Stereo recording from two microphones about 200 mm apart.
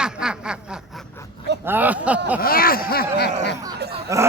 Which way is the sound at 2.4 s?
45° left (ahead or behind).